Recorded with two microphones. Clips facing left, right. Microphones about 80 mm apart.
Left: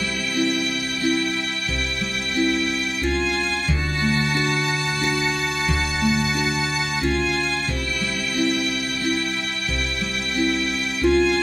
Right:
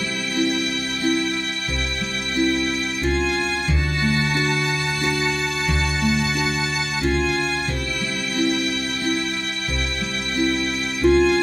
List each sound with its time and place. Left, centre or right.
3.1 s music: right
7.1 s music: right
11.0 s music: right